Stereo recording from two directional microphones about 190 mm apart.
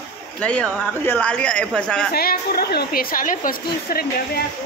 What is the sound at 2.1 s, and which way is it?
A woman's voice, 55° left (ahead or behind).